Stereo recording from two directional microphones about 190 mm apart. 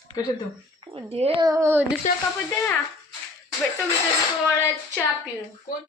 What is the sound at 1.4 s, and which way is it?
Speech, 15° right (ahead or behind).